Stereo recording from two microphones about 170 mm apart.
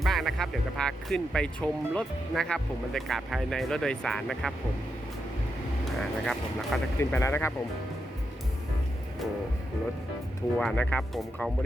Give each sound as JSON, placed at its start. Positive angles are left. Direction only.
{"t": 0.0, "sound": "speech", "side_deg": 0}
{"t": 5.8, "sound": "speech", "side_deg": 0}
{"t": 7.0, "sound": "speech", "side_deg": 15}
{"t": 10.6, "sound": "speech", "side_deg": 5}